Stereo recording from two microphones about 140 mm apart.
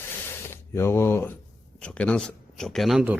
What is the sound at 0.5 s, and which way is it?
Speech, 20° left (ahead or behind).